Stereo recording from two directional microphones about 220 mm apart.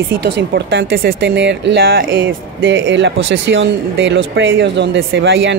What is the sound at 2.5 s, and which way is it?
Speech, 55° right (ahead or behind).